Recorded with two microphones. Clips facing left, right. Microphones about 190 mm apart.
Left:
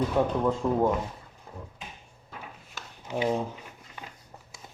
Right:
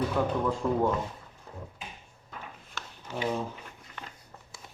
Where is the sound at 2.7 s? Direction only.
15° left (ahead or behind).